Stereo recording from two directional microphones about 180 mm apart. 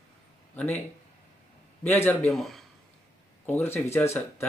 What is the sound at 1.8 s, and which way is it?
Speech, 15° left (ahead or behind).